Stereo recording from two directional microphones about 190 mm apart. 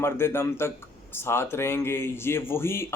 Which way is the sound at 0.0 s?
15° left (ahead or behind).